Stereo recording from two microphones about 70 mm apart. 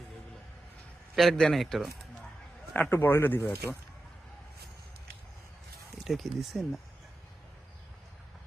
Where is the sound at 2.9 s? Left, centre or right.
Left.